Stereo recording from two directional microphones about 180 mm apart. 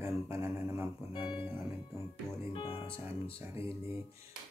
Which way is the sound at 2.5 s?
30° left (ahead or behind).